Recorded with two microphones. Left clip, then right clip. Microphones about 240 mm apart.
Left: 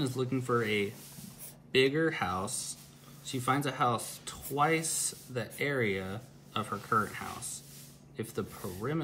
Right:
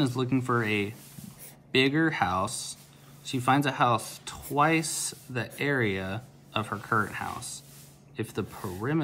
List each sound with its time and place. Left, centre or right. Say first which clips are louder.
0.0 s speech: right 5 dB; right